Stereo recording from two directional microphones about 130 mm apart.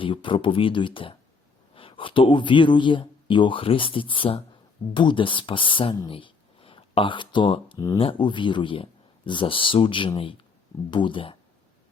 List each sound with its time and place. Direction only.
0.0 s speech: 40° left (ahead or behind)
6.1 s a sound: 40° left (ahead or behind)
7.9 s speech: 40° left (ahead or behind)